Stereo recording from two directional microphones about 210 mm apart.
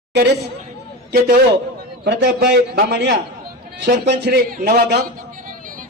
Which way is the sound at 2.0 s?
50° right (ahead or behind).